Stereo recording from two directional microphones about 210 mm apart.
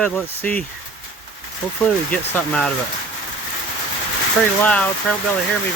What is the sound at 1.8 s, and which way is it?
Speech, 10° left (ahead or behind).